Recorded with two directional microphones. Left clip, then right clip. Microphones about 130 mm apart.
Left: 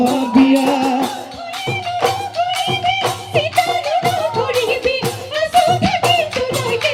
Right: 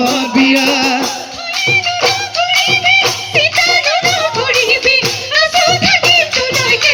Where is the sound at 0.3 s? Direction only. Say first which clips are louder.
Right 2 dB; 50° left (ahead or behind).